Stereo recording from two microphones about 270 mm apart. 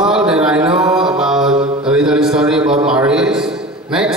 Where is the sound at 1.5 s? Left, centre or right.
Right.